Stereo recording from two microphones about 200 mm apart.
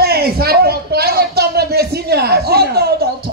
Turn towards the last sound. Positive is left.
turn(degrees=-50)  # may be behind; listen again after turning